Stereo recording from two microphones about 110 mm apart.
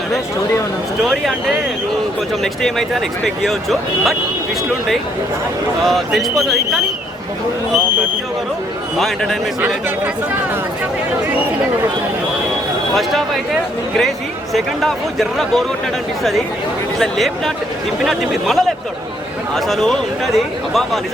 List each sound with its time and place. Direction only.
1.0 s speech: centre (ahead or behind)
2.4 s speech: centre (ahead or behind)
5.8 s speech: centre (ahead or behind)
9.0 s speech: 5° left (ahead or behind)
9.6 s speech: 20° right (ahead or behind)
12.9 s speech: centre (ahead or behind)
14.5 s speech: centre (ahead or behind)
17.0 s speech: centre (ahead or behind)